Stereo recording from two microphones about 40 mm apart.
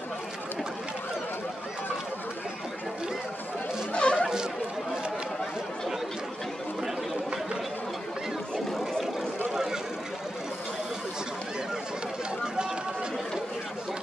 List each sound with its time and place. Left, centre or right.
3.9 s a sound: left
8.7 s vehicle: centre
9.5 s vehicle: centre